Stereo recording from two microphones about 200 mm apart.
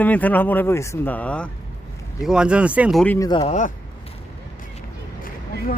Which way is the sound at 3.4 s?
35° left (ahead or behind).